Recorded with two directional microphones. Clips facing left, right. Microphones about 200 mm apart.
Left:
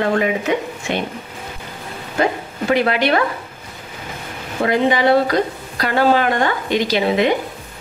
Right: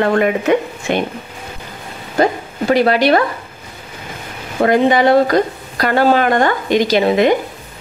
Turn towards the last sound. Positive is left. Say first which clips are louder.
# right 4 dB
turn(degrees=-45)  # may be behind; listen again after turning